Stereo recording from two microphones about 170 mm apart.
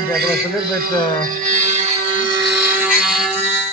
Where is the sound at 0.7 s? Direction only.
55° right (ahead or behind); by 2.2 s 40° right (ahead or behind).